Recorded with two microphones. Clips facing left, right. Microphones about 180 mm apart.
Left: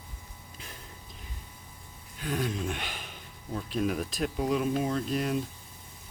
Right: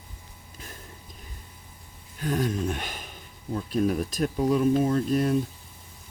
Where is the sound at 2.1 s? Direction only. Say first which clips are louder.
Right 5 dB; 45° right (ahead or behind).